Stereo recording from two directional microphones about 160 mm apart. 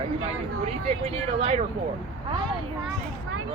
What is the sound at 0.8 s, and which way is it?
Speech, 35° right (ahead or behind).